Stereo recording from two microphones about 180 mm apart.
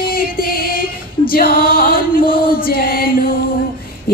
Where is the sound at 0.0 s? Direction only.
55° left (ahead or behind).